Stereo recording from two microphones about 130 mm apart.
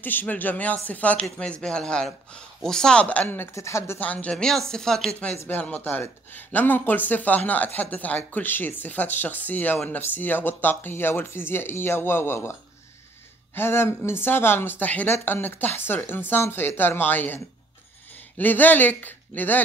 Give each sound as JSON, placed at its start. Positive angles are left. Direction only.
{"t": 0.0, "sound": "speech", "side_deg": 15}
{"t": 13.6, "sound": "speech", "side_deg": 20}
{"t": 18.4, "sound": "speech", "side_deg": 15}